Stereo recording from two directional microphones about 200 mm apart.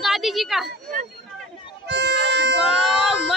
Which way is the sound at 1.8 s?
55° right (ahead or behind).